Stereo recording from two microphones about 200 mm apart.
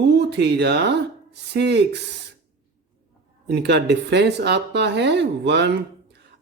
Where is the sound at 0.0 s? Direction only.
55° right (ahead or behind).